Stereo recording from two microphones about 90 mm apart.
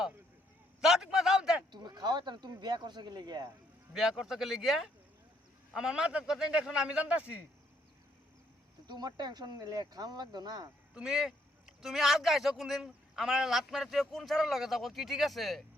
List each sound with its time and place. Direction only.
0.8 s a sound: 5° right (ahead or behind)
1.7 s speech: 50° right (ahead or behind)
3.9 s a man's voice: 5° right (ahead or behind)
8.9 s speech: 50° right (ahead or behind)
10.9 s a man's voice: 5° right (ahead or behind)